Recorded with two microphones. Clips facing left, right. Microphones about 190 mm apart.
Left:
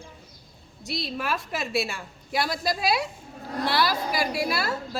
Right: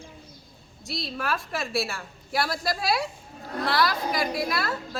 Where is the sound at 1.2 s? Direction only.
20° left (ahead or behind).